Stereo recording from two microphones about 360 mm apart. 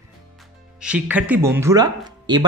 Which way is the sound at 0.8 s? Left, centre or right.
Centre.